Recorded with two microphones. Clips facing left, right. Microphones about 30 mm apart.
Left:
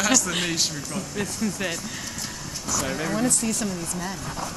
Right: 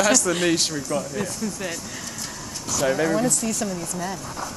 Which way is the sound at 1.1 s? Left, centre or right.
Centre.